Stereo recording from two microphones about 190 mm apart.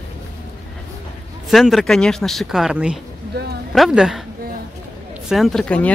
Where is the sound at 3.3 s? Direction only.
60° right (ahead or behind).